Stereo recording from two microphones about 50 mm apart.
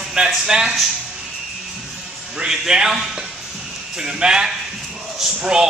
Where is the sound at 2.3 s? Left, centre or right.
Centre.